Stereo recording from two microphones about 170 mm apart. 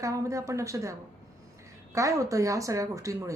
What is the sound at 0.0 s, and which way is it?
A woman's voice, 20° right (ahead or behind).